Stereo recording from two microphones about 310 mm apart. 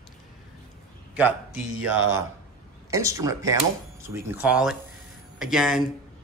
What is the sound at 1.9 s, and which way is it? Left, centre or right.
Speech, centre.